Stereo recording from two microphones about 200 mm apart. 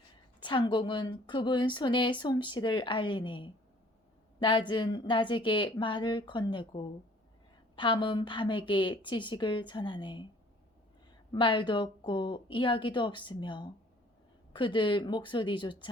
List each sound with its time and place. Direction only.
0.3 s a woman's voice: 25° left (ahead or behind)
11.3 s a woman's voice: 25° left (ahead or behind)